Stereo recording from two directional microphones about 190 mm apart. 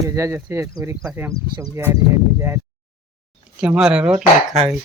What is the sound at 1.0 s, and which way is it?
Speech, 5° right (ahead or behind).